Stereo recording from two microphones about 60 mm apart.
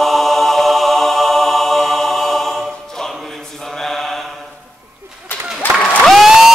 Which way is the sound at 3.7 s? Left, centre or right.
Centre.